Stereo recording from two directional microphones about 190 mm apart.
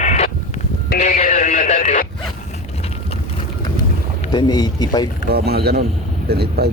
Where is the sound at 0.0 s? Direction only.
40° left (ahead or behind).